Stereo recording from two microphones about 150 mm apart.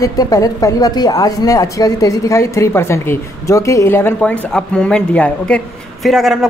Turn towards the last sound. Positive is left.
turn(degrees=0)  # may be behind; listen again after turning